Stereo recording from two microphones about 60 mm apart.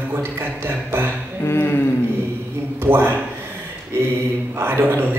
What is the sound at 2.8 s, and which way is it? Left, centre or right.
Speech, right.